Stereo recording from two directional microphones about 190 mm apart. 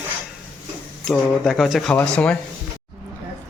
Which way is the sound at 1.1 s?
Centre (ahead or behind).